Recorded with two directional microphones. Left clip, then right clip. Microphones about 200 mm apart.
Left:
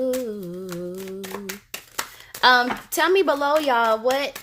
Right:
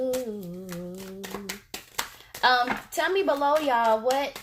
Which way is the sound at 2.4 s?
50° left (ahead or behind).